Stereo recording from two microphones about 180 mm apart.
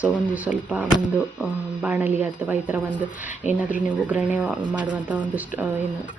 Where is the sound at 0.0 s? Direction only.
5° right (ahead or behind).